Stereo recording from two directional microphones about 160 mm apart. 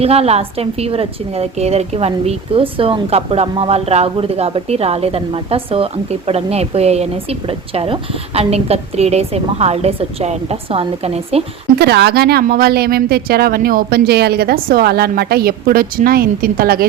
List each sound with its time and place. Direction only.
0.0 s a woman's voice: 40° right (ahead or behind)
11.8 s speech: 90° right; by 16.8 s 65° right (ahead or behind)